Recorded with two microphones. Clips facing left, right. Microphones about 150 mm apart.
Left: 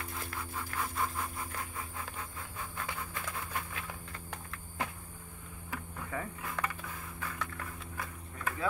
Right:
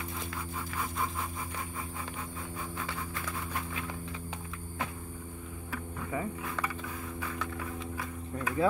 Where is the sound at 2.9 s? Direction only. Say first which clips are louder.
Right 2 dB; 10° left (ahead or behind).